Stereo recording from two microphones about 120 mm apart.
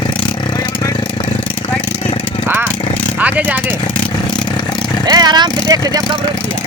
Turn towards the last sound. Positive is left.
turn(degrees=-35)  # may be behind; listen again after turning